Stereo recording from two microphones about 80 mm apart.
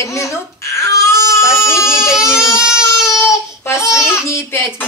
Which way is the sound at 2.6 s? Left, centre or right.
Centre.